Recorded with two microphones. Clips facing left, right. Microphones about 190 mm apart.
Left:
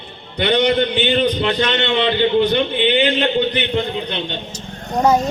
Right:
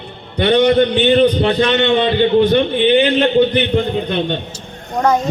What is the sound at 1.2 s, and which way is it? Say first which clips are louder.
A man's voice: right 5 dB; 45° right (ahead or behind).